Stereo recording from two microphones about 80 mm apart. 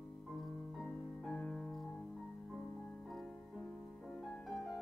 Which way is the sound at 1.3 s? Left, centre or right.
Centre.